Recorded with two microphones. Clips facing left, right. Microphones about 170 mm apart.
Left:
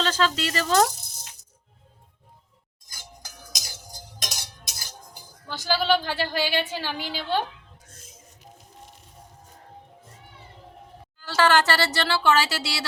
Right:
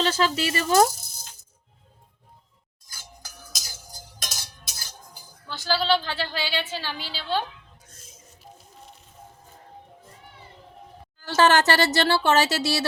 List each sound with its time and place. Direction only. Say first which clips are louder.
0.0 s speech: right 1 dB; 10° right (ahead or behind)
4.2 s cutlery: left 2 dB; 15° left (ahead or behind)
11.3 s speech: right 2 dB; 20° right (ahead or behind)